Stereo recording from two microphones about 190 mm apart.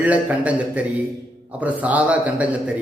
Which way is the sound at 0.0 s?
5° right (ahead or behind).